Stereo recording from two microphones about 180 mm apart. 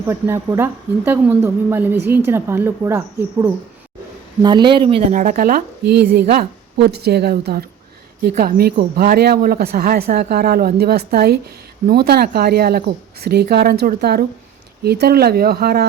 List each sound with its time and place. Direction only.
0.0 s speech: 15° right (ahead or behind)
4.4 s speech: 25° right (ahead or behind)
5.1 s speech: 45° right (ahead or behind)